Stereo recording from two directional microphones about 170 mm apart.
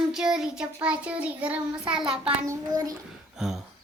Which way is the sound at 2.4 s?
20° right (ahead or behind).